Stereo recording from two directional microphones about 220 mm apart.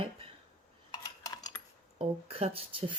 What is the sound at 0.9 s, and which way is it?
Cutlery, 15° left (ahead or behind).